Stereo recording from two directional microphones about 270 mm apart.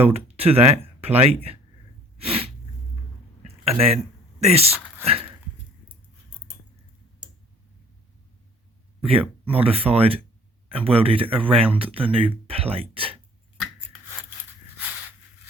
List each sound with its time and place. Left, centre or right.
0.0 s speech: right
2.1 s sneeze: right
3.6 s speech: right
9.0 s a sound: right
9.5 s speech: right